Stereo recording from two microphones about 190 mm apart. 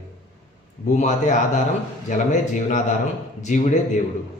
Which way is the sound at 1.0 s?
40° left (ahead or behind).